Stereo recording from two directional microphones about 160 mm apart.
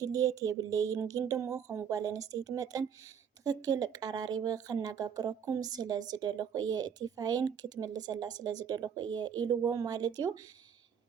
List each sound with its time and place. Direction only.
0.0 s speech: 20° right (ahead or behind)